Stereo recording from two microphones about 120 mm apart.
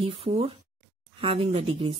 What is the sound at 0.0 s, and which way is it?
Speech, 55° right (ahead or behind).